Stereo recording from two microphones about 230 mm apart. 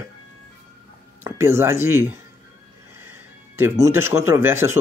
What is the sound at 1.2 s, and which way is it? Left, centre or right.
Speech, centre.